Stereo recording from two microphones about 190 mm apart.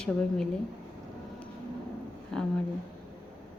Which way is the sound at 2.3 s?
5° left (ahead or behind).